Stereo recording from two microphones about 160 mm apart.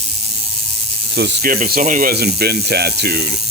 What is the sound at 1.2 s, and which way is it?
Speech, 75° right (ahead or behind).